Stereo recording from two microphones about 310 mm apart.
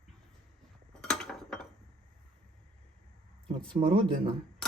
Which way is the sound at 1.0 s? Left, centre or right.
Centre.